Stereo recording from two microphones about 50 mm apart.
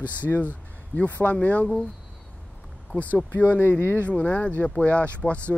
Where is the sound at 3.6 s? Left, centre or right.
Left.